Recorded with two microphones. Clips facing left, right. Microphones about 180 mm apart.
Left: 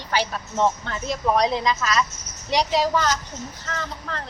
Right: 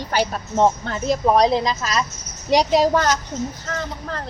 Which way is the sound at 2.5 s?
45° right (ahead or behind).